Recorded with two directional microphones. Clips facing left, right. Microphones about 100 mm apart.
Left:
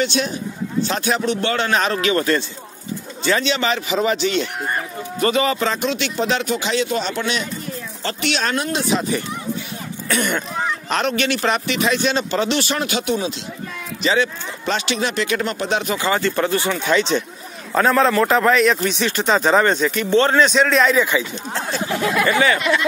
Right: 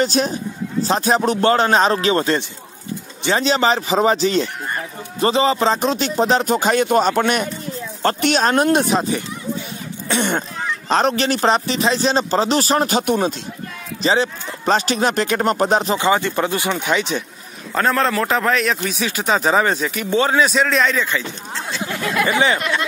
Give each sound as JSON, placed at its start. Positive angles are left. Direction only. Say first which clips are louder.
{"t": 0.0, "sound": "a man's voice", "louder": "right 2 dB", "side_deg": -40}
{"t": 3.3, "sound": "a man's voice", "louder": "right 7 dB", "side_deg": -35}
{"t": 10.0, "sound": "throat clearing", "louder": "right 1 dB", "side_deg": -25}
{"t": 10.9, "sound": "a man's voice", "louder": "right 5 dB", "side_deg": -35}
{"t": 13.1, "sound": "speech", "louder": "right 3 dB", "side_deg": -50}
{"t": 14.0, "sound": "a man's voice", "louder": "right 1 dB", "side_deg": -35}
{"t": 16.0, "sound": "speech", "louder": "right 2 dB", "side_deg": -15}
{"t": 17.7, "sound": "a man's voice", "louder": "left 3 dB", "side_deg": 0}
{"t": 22.2, "sound": "speech", "louder": "right 1 dB", "side_deg": -20}